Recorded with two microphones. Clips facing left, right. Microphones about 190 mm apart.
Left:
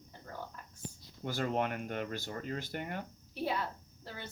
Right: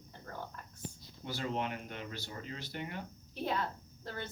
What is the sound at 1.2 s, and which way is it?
Speech, 50° left (ahead or behind).